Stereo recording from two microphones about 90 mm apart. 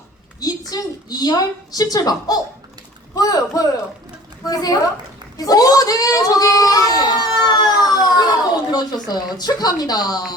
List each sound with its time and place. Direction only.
0.3 s a woman's voice: 45° left (ahead or behind)